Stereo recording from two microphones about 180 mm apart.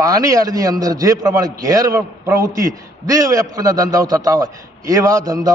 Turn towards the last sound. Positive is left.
turn(degrees=-20)  # may be behind; listen again after turning